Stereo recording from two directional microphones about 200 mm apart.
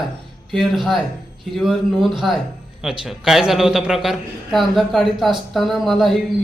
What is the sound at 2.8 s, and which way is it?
A man's voice, centre (ahead or behind).